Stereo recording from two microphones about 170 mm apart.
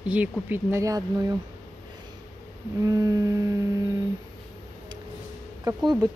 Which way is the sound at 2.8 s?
20° right (ahead or behind).